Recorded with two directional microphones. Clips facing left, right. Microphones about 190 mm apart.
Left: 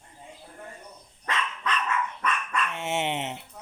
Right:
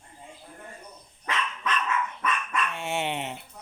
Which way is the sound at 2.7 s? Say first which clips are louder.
Left 1 dB; 20° left (ahead or behind).